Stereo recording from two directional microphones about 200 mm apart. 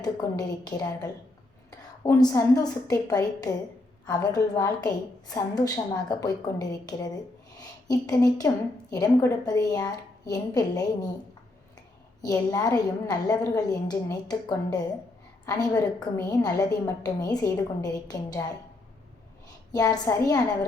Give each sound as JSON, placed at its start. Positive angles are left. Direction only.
{"t": 0.0, "sound": "a woman's voice", "side_deg": 20}
{"t": 12.2, "sound": "a woman's voice", "side_deg": 20}
{"t": 19.7, "sound": "a woman's voice", "side_deg": 20}